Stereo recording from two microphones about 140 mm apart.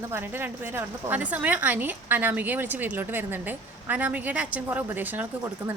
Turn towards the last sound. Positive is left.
turn(degrees=-15)  # may be behind; listen again after turning